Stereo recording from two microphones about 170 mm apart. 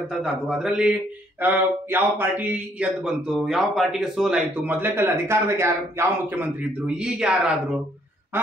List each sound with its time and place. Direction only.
0.1 s speech: 5° right (ahead or behind)